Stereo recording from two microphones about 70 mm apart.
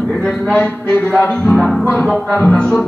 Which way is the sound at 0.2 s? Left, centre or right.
Centre.